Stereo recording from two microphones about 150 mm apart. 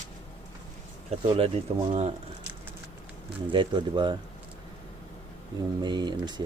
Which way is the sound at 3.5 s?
30° right (ahead or behind).